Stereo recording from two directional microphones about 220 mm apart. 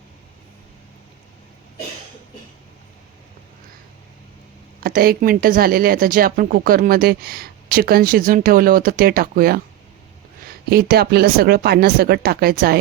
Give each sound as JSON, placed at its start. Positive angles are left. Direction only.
{"t": 4.8, "sound": "speech", "side_deg": -40}
{"t": 10.7, "sound": "speech", "side_deg": -45}